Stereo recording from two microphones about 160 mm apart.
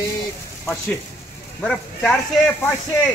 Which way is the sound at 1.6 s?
5° left (ahead or behind).